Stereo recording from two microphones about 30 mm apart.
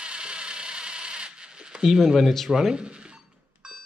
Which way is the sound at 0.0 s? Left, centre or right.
Right.